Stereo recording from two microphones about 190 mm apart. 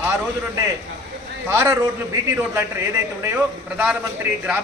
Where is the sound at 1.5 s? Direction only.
15° right (ahead or behind).